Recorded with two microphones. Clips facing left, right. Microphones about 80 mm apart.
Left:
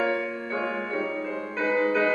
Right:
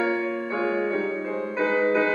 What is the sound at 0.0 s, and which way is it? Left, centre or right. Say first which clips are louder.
Music: right 2 dB; centre.